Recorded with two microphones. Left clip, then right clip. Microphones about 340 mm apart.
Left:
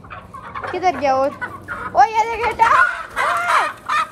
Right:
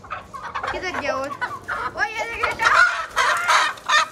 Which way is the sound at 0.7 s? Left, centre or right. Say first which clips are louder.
Left 12 dB; centre.